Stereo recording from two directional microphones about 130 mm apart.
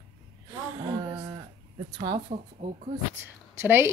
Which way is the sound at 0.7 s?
35° right (ahead or behind).